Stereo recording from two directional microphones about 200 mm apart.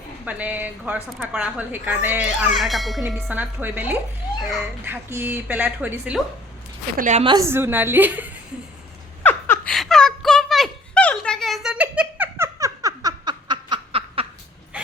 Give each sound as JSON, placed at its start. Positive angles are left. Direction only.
{"t": 0.3, "sound": "a woman's voice", "side_deg": -5}
{"t": 6.9, "sound": "a woman's voice", "side_deg": -40}
{"t": 7.3, "sound": "a woman's voice", "side_deg": -15}
{"t": 9.2, "sound": "a sound", "side_deg": 5}